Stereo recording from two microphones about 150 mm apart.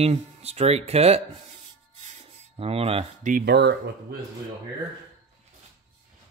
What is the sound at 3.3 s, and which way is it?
Speech, 80° right.